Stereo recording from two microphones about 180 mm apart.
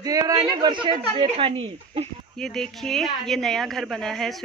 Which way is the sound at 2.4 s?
5° left (ahead or behind).